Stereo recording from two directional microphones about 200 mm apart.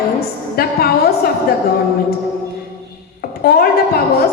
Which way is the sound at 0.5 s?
50° left (ahead or behind).